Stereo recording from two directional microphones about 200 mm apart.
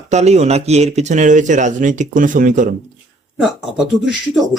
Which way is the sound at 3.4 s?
Centre (ahead or behind).